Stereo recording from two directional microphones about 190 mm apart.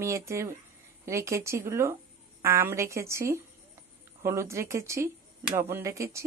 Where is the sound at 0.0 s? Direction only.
15° right (ahead or behind).